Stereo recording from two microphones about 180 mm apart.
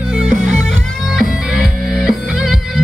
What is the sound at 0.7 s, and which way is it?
Music, 5° right (ahead or behind).